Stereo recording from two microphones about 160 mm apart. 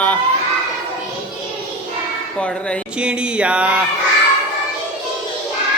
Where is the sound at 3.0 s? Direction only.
5° right (ahead or behind).